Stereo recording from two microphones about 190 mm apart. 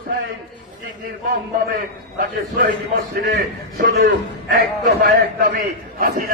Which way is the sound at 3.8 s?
50° right (ahead or behind).